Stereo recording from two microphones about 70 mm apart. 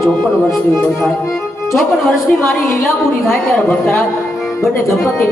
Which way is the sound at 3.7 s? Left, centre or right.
Centre.